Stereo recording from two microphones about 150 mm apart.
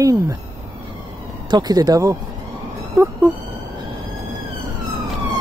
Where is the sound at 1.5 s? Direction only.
25° right (ahead or behind).